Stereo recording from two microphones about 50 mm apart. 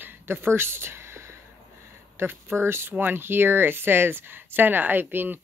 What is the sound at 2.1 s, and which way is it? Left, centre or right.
Speech, right.